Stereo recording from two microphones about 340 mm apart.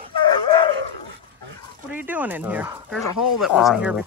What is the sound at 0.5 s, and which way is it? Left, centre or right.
Dog, centre.